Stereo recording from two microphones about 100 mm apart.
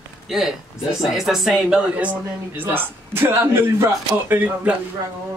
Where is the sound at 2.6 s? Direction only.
20° right (ahead or behind).